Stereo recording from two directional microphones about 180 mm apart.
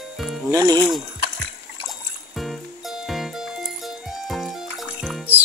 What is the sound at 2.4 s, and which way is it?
Music, centre (ahead or behind).